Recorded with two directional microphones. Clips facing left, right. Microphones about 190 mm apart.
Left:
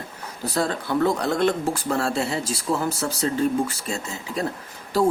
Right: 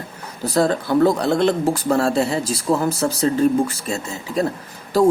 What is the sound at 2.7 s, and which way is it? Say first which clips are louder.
Speech: right 5 dB; 50° right (ahead or behind).